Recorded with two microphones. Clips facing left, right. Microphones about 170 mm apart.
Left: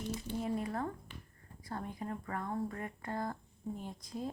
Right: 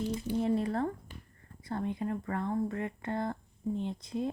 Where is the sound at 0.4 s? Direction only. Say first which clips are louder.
Right 6 dB; 30° right (ahead or behind).